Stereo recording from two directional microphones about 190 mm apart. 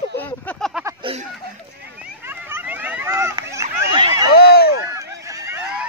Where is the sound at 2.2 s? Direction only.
10° right (ahead or behind).